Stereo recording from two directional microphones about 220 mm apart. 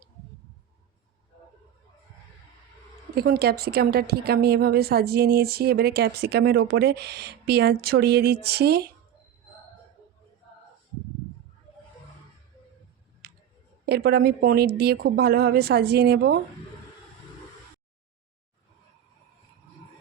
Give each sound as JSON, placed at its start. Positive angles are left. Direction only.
{"t": 3.2, "sound": "a woman's voice", "side_deg": -45}
{"t": 13.2, "sound": "a sound", "side_deg": -45}
{"t": 13.8, "sound": "a woman's voice", "side_deg": -45}